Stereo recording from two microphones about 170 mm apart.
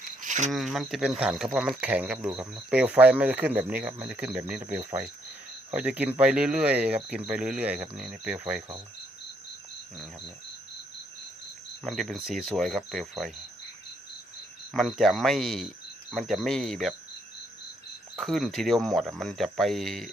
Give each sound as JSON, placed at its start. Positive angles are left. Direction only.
{"t": 0.2, "sound": "a sound", "side_deg": -45}
{"t": 0.5, "sound": "speech", "side_deg": 0}
{"t": 11.9, "sound": "speech", "side_deg": 0}
{"t": 14.7, "sound": "speech", "side_deg": 0}
{"t": 18.2, "sound": "speech", "side_deg": 0}